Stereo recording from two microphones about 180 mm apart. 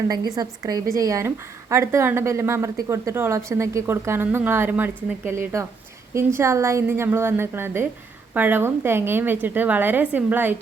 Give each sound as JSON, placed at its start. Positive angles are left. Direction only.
{"t": 0.1, "sound": "a woman's voice", "side_deg": -20}